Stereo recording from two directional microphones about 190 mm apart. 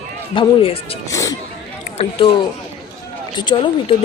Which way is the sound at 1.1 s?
15° left (ahead or behind).